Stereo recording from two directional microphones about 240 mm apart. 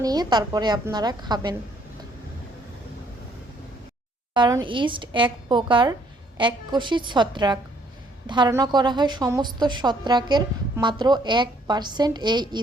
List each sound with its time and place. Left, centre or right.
0.0 s a woman's voice: centre
4.4 s a woman's voice: centre